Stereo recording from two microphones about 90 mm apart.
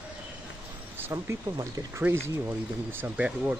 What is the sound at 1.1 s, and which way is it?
Speech, 35° right (ahead or behind).